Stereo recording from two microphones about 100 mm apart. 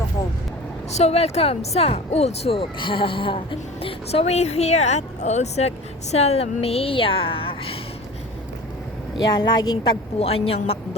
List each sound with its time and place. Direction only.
0.9 s a woman's voice: 90° left; by 7.8 s 65° left (ahead or behind)
9.1 s speech: 50° left (ahead or behind)
10.2 s a woman's voice: 75° left (ahead or behind)